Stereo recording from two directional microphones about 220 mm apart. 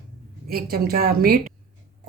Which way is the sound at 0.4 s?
45° right (ahead or behind).